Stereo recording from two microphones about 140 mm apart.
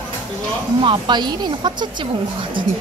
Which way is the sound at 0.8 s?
30° right (ahead or behind).